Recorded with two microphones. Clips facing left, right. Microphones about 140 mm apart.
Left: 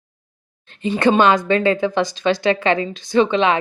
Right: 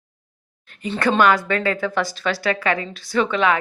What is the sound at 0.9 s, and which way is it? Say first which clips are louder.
Speech: left 3 dB; 20° left (ahead or behind).